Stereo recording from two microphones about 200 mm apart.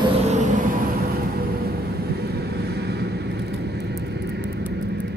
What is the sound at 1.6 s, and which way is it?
Vehicle, 50° right (ahead or behind).